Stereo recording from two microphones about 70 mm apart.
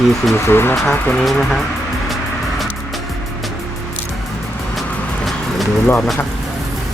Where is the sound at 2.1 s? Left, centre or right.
Centre.